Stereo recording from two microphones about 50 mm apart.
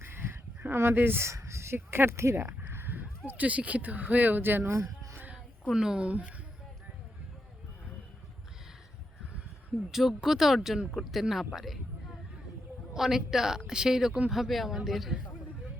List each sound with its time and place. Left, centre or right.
0.0 s a sound: right
1.3 s speech: right
5.7 s a woman's voice: centre
9.9 s a woman's voice: centre
12.9 s a woman's voice: centre